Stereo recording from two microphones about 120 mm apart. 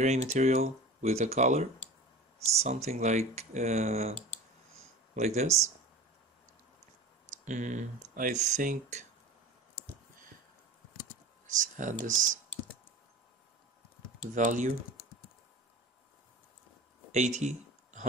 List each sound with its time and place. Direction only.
0.0 s speech: 65° right (ahead or behind)
2.5 s speech: 65° right (ahead or behind)
5.1 s speech: 70° right (ahead or behind)
7.4 s speech: 90° right
11.5 s speech: 90° right
14.3 s speech: 90° right
17.1 s a sound: 70° right (ahead or behind)